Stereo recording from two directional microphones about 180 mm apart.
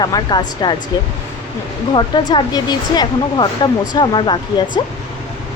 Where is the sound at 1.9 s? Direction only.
25° left (ahead or behind).